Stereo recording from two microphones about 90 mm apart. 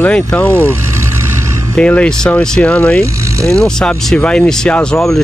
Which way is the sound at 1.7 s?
15° left (ahead or behind).